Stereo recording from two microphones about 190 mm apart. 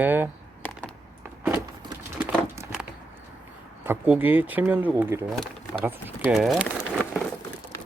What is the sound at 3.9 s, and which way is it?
Speech, 10° right (ahead or behind).